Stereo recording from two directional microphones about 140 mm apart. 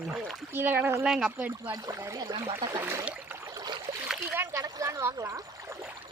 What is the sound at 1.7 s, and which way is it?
Speech, 25° right (ahead or behind).